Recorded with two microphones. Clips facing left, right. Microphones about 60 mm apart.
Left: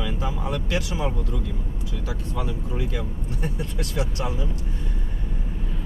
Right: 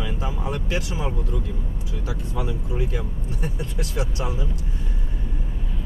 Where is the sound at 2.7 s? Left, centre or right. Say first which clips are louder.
Right 1 dB; centre.